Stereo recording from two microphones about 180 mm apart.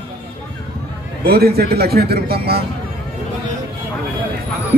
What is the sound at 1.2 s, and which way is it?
Speech, 60° right (ahead or behind).